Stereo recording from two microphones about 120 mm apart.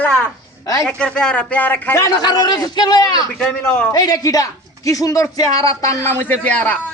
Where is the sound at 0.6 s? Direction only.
30° left (ahead or behind).